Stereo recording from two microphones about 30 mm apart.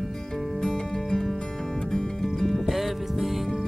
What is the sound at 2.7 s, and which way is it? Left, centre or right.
Music, centre.